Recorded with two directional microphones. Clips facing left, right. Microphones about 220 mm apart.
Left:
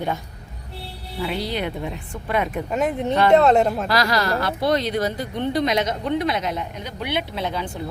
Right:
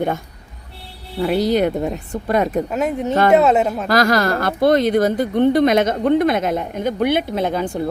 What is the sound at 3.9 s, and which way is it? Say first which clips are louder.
Speech: right 5 dB; 50° right (ahead or behind).